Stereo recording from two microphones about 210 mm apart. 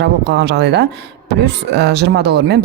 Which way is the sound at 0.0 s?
55° right (ahead or behind).